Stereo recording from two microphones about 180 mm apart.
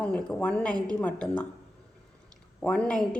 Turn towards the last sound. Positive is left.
turn(degrees=5)  # may be behind; listen again after turning